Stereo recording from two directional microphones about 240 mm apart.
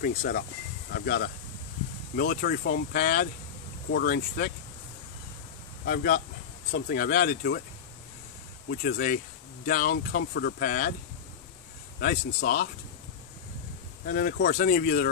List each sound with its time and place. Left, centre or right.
0.0 s speech: left
5.9 s speech: left
8.6 s speech: left
12.0 s speech: left
14.0 s speech: left